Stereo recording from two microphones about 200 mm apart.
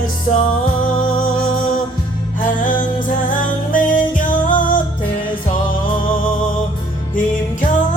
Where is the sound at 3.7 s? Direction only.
40° left (ahead or behind).